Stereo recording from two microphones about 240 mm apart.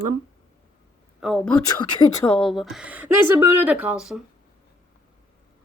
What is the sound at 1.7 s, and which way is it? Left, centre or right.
Speech, centre.